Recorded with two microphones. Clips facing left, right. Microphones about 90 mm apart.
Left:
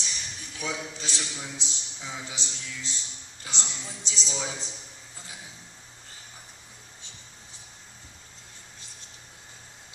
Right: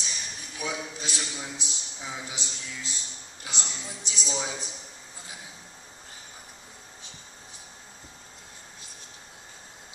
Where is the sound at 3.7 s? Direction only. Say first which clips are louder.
Right 1 dB; 15° right (ahead or behind).